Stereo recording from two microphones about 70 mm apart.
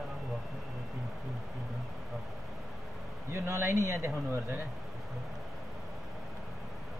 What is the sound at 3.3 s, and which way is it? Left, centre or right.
Speech, right.